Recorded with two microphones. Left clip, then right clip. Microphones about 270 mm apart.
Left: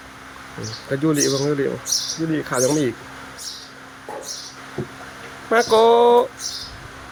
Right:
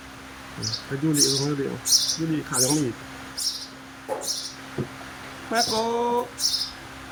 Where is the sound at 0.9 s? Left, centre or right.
Centre.